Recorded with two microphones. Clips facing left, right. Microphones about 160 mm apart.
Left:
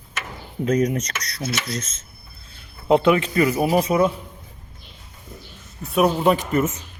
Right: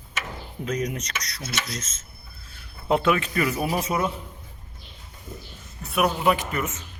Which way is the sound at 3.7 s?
35° left (ahead or behind).